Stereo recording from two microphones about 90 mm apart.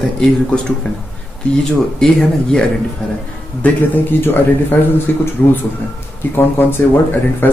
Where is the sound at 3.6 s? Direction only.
20° left (ahead or behind).